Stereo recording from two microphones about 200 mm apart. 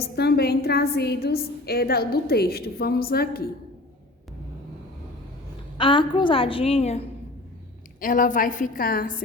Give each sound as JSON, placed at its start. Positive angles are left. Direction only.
{"t": 0.2, "sound": "a woman's voice", "side_deg": 55}
{"t": 5.7, "sound": "a woman's voice", "side_deg": 25}
{"t": 8.0, "sound": "a woman's voice", "side_deg": 40}